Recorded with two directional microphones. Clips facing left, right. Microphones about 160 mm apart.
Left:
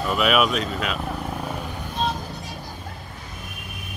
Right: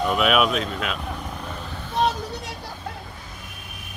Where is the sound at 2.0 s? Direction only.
75° right (ahead or behind).